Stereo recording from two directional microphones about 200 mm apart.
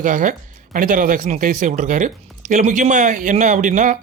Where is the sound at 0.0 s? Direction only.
40° right (ahead or behind).